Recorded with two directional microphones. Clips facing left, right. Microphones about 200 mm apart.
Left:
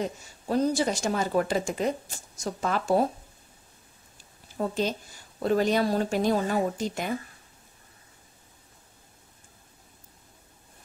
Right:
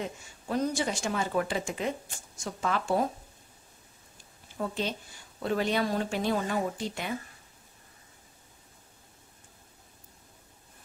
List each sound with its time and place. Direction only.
0.0 s speech: 35° left (ahead or behind)
4.6 s speech: 40° left (ahead or behind)